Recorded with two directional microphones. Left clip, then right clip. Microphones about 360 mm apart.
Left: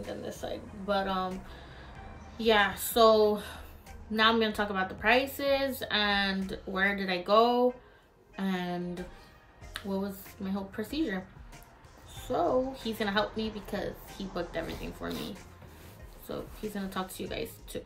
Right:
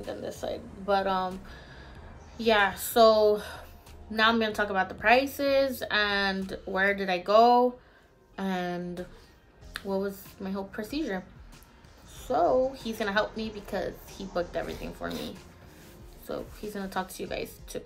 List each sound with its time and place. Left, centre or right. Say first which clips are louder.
0.0 s a woman's voice: right 3 dB; centre
12.2 s a woman's voice: right 4 dB; centre
16.3 s a woman's voice: right 2 dB; centre